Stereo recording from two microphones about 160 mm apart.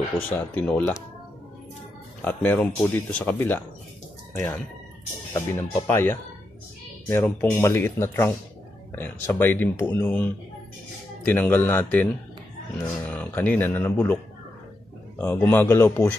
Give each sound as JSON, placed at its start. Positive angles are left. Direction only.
{"t": 0.3, "sound": "speech", "side_deg": 10}
{"t": 2.2, "sound": "speech", "side_deg": 10}
{"t": 5.3, "sound": "speech", "side_deg": 15}
{"t": 15.1, "sound": "speech", "side_deg": 10}